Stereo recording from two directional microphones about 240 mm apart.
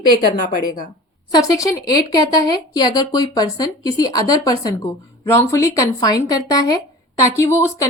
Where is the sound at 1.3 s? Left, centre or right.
Centre.